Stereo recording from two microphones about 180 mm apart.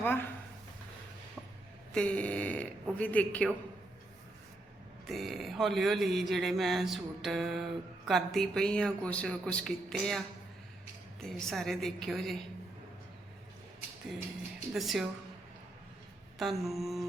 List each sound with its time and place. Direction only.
0.0 s speech: 10° left (ahead or behind)
1.9 s a sound: 5° left (ahead or behind)
5.0 s a man's voice: centre (ahead or behind)
14.7 s a man's voice: centre (ahead or behind)
16.4 s a man's voice: centre (ahead or behind)